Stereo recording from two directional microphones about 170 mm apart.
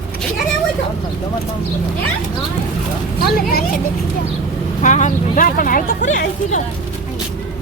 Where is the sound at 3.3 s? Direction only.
60° left (ahead or behind).